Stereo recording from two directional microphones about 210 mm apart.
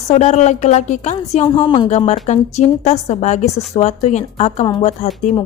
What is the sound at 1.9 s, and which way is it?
A woman's voice, 30° left (ahead or behind).